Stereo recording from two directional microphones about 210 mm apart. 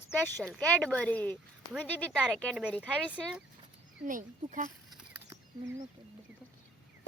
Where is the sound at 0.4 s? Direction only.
5° left (ahead or behind).